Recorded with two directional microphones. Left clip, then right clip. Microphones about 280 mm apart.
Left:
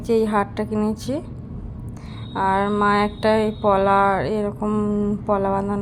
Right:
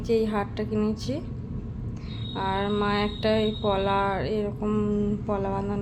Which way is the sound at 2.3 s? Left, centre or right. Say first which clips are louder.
Left 7 dB; centre.